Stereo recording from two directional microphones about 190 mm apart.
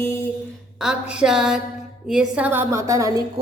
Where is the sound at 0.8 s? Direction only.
5° right (ahead or behind).